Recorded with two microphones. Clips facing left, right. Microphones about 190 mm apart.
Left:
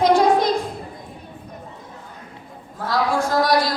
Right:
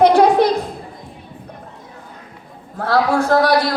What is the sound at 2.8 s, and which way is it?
Speech, 65° right (ahead or behind).